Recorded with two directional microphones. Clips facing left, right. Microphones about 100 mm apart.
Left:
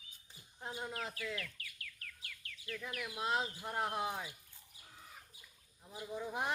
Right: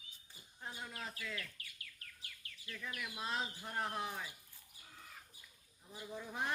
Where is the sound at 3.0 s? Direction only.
20° left (ahead or behind).